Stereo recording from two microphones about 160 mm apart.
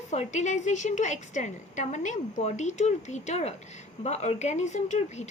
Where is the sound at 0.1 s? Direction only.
45° left (ahead or behind).